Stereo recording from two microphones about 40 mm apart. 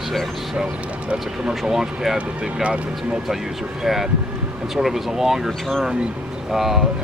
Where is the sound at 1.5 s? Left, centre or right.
Centre.